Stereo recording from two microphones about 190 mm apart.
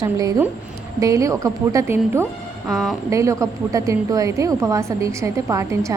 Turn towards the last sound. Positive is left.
turn(degrees=-15)  # may be behind; listen again after turning